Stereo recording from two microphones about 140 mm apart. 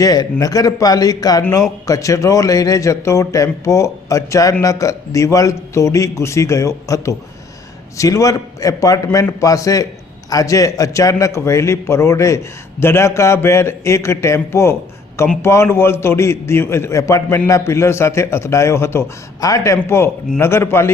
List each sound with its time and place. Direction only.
0.0 s a man's voice: 25° left (ahead or behind)